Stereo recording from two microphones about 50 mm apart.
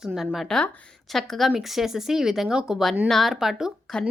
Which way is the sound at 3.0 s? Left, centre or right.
Centre.